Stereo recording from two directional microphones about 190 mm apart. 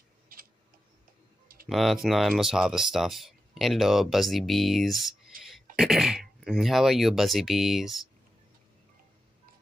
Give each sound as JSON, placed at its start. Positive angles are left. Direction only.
{"t": 0.3, "sound": "tick-tock", "side_deg": -50}
{"t": 1.7, "sound": "speech", "side_deg": 0}